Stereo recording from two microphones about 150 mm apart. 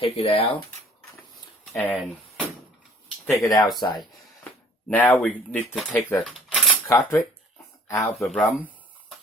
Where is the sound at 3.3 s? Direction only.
20° left (ahead or behind).